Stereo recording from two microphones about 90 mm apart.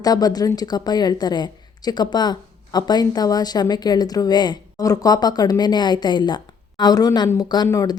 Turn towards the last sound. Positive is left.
turn(degrees=40)  # may be behind; listen again after turning